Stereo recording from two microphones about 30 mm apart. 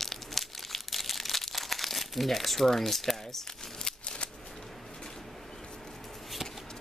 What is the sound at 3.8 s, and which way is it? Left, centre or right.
Scissors, left.